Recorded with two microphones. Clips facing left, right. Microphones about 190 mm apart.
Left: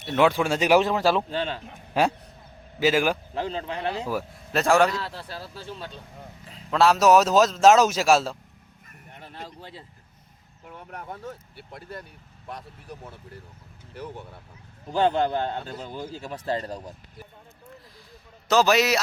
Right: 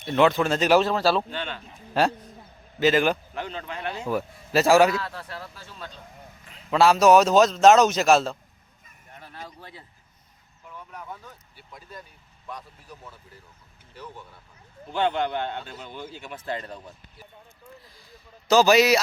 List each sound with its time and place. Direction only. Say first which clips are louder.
0.0 s a man's voice: right 1 dB; 5° left (ahead or behind)
1.3 s a man's voice: left 5 dB; 35° left (ahead or behind)
1.9 s a man's voice: even; 10° left (ahead or behind)
3.3 s a man's voice: left 4 dB; 30° left (ahead or behind)
4.1 s a man's voice: right 3 dB; centre (ahead or behind)
4.9 s speech: right 1 dB; 30° left (ahead or behind)
6.7 s a man's voice: right 1 dB; centre (ahead or behind)
9.3 s speech: left 2 dB; 25° left (ahead or behind)
10.7 s speech: left 2 dB; 60° left (ahead or behind)
14.9 s a man's voice: left 3 dB; 35° left (ahead or behind)
18.4 s a man's voice: right 3 dB; centre (ahead or behind)